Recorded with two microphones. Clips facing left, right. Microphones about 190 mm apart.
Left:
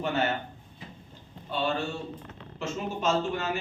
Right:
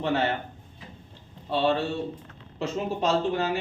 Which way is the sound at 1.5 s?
30° right (ahead or behind).